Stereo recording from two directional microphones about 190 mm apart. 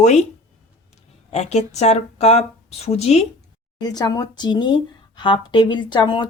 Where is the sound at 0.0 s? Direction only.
40° left (ahead or behind).